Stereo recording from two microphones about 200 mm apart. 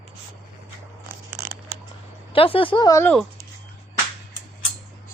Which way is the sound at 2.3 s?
25° left (ahead or behind).